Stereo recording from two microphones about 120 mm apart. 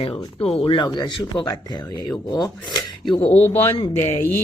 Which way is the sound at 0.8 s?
35° left (ahead or behind).